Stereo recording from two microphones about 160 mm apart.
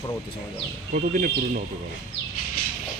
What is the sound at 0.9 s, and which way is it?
Speech, 55° right (ahead or behind).